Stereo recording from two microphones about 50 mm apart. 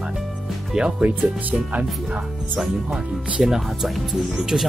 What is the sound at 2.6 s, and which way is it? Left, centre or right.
Speech, centre.